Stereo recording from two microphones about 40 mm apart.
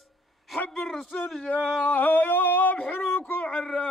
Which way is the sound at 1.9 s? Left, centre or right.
Left.